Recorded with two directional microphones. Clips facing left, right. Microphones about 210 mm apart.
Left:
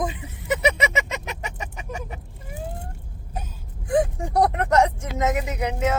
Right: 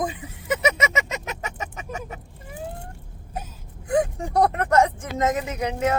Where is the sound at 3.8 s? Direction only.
20° left (ahead or behind).